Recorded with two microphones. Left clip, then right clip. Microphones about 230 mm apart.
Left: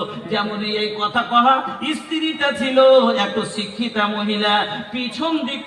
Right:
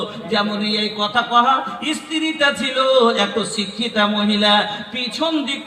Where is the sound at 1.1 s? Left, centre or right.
Right.